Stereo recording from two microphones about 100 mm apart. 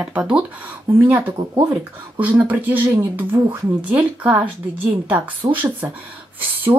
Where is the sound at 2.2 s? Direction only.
15° right (ahead or behind).